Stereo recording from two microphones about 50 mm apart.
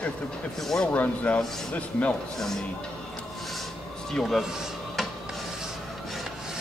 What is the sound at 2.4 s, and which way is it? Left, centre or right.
Speech, centre.